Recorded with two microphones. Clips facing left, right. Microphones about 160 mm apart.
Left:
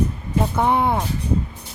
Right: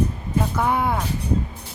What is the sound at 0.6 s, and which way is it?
Speech, 25° left (ahead or behind).